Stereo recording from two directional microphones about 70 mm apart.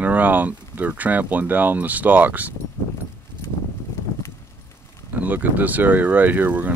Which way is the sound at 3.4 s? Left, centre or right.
Left.